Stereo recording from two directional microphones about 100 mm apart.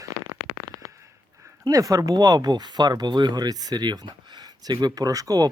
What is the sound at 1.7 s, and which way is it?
Speech, 35° right (ahead or behind).